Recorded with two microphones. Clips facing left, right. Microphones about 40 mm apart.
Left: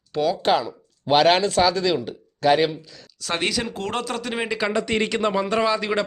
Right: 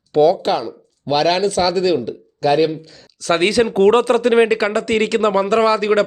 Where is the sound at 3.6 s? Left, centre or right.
Right.